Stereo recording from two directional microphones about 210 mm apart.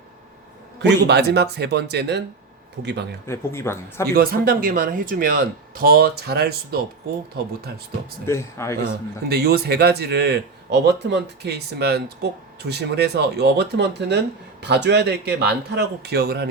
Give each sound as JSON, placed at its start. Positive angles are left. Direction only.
{"t": 0.8, "sound": "a man's voice", "side_deg": -50}
{"t": 3.2, "sound": "speech", "side_deg": 10}
{"t": 4.1, "sound": "a man's voice", "side_deg": -45}
{"t": 8.3, "sound": "speech", "side_deg": 15}
{"t": 9.3, "sound": "a man's voice", "side_deg": -50}